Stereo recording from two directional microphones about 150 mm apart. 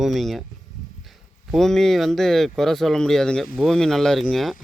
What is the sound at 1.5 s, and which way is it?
Speech, 5° left (ahead or behind).